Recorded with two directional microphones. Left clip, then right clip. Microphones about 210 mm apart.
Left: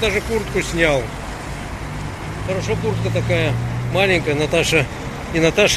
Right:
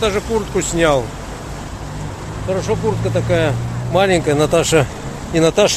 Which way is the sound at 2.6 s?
30° right (ahead or behind).